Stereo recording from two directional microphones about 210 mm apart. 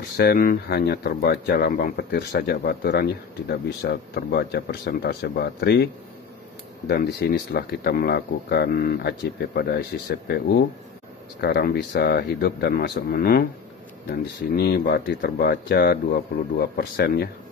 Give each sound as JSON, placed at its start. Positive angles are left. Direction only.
{"t": 0.2, "sound": "speech", "side_deg": 45}
{"t": 6.9, "sound": "speech", "side_deg": 50}
{"t": 14.5, "sound": "speech", "side_deg": 50}